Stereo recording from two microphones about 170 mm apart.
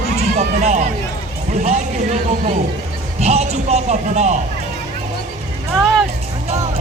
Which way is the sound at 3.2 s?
40° right (ahead or behind).